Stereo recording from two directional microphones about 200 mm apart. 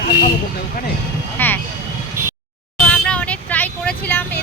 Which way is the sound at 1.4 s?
10° left (ahead or behind).